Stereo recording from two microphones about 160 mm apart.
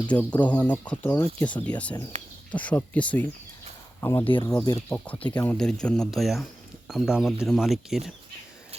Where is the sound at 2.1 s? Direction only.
45° right (ahead or behind).